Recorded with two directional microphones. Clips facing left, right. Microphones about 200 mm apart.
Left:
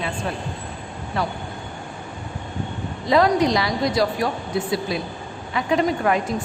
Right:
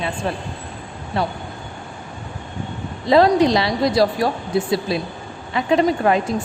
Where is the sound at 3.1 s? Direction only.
30° right (ahead or behind).